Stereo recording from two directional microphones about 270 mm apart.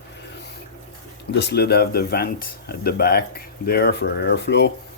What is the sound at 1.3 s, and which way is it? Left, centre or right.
Speech, left.